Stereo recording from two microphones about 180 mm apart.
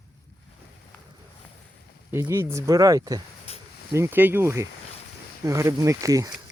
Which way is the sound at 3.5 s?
35° left (ahead or behind).